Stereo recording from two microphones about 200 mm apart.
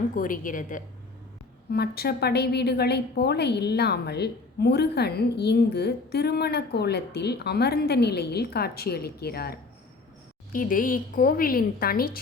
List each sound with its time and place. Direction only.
0.2 s a woman's voice: 40° left (ahead or behind)
1.7 s a woman's voice: 50° left (ahead or behind)